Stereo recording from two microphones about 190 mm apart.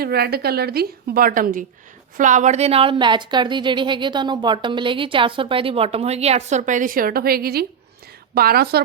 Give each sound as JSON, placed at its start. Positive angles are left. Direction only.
{"t": 0.0, "sound": "a woman's voice", "side_deg": -55}